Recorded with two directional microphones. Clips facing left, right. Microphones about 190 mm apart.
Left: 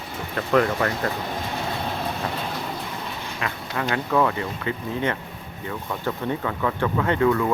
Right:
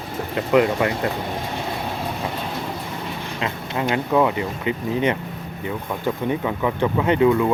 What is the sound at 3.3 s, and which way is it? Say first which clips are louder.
Speech: right 3 dB; 25° right (ahead or behind).